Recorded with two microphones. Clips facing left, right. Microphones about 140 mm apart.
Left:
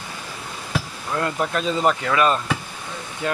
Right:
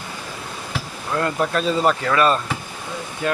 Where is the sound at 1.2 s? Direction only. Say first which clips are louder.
Right 2 dB; 15° left (ahead or behind).